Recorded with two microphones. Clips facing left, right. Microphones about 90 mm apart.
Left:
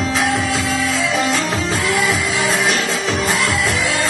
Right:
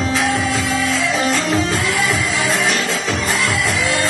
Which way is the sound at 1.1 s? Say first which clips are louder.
Right 1 dB; 15° left (ahead or behind).